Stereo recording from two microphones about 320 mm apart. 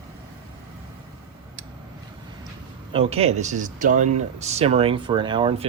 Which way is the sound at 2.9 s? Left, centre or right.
Centre.